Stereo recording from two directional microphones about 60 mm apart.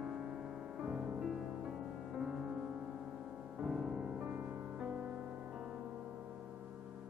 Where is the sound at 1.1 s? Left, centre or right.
Centre.